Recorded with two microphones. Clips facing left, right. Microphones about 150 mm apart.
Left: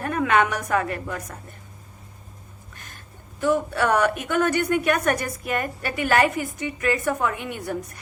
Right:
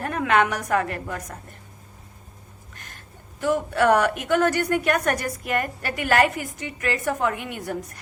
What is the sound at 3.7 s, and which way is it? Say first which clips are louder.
A woman's voice: right 2 dB; 40° right (ahead or behind).